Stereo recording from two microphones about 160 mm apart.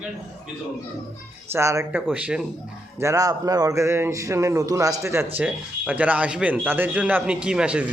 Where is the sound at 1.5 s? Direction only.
15° right (ahead or behind).